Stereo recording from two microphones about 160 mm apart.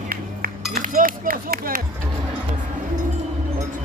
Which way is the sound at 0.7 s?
60° right (ahead or behind).